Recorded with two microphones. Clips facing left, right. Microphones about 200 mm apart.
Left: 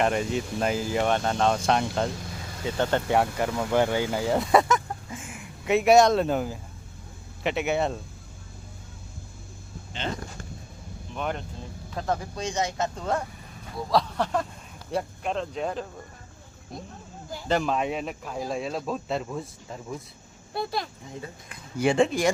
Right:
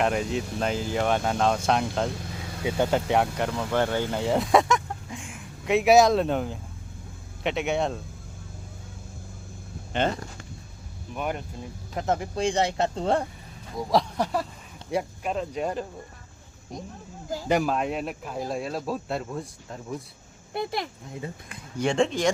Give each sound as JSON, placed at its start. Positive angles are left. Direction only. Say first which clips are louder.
{"t": 0.0, "sound": "speech", "louder": "even", "side_deg": 0}
{"t": 3.1, "sound": "speech", "louder": "even", "side_deg": 0}
{"t": 9.9, "sound": "speech", "louder": "right 8 dB", "side_deg": -60}
{"t": 11.1, "sound": "speech", "louder": "right 1 dB", "side_deg": -10}
{"t": 11.9, "sound": "speech", "louder": "right 3 dB", "side_deg": -20}
{"t": 13.7, "sound": "speech", "louder": "right 1 dB", "side_deg": -15}
{"t": 17.5, "sound": "speech", "louder": "right 1 dB", "side_deg": -5}
{"t": 20.5, "sound": "speech", "louder": "right 1 dB", "side_deg": -20}
{"t": 21.8, "sound": "speech", "louder": "left 2 dB", "side_deg": 5}